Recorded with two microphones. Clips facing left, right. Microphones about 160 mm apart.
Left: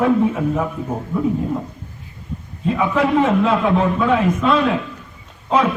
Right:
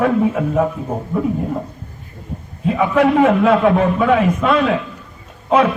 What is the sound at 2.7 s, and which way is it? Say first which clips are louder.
A man's voice: right 3 dB; 60° right (ahead or behind).